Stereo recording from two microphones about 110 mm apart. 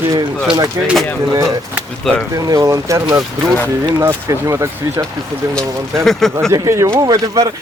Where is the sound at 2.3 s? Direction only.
35° right (ahead or behind).